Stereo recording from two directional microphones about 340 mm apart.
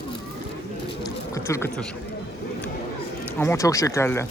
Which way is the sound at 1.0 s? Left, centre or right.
Centre.